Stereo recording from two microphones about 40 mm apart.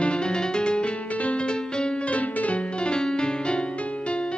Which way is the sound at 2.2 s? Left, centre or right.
Left.